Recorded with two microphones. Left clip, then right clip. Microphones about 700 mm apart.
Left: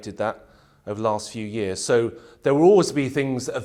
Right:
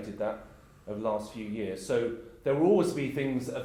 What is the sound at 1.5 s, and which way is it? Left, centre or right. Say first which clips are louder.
A man's voice: left 9 dB; left.